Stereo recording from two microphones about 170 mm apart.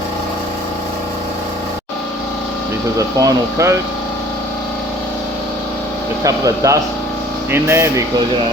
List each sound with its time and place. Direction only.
3.0 s speech: 20° right (ahead or behind)
6.2 s speech: 20° right (ahead or behind)